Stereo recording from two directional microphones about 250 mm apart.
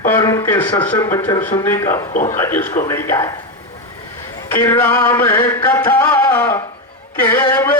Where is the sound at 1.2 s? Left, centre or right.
Centre.